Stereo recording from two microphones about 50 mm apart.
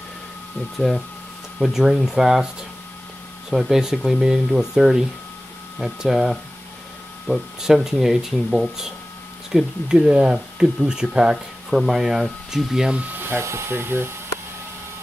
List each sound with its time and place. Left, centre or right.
0.7 s speech: centre
1.6 s speech: centre
3.4 s speech: centre
11.7 s speech: centre
13.1 s dental drill: right
13.4 s speech: right